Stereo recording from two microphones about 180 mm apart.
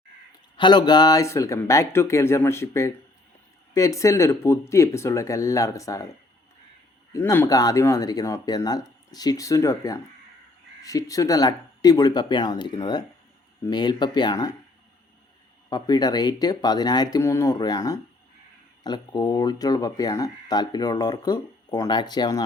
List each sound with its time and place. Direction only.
0.5 s speech: 25° left (ahead or behind)
7.1 s speech: 15° left (ahead or behind)
15.7 s speech: 20° left (ahead or behind)